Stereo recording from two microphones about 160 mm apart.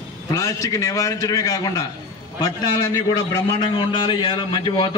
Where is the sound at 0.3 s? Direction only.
20° left (ahead or behind).